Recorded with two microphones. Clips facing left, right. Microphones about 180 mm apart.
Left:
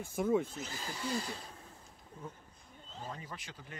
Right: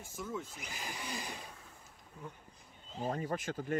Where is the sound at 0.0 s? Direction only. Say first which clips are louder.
Left 10 dB; 55° left (ahead or behind).